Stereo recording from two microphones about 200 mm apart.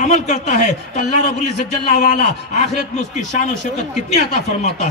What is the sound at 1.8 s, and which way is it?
A man's voice, 35° left (ahead or behind).